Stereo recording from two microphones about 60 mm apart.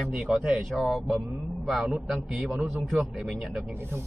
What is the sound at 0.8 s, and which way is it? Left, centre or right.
Speech, centre.